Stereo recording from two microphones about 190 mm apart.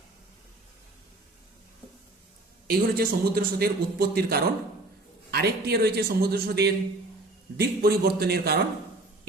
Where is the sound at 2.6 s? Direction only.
50° right (ahead or behind).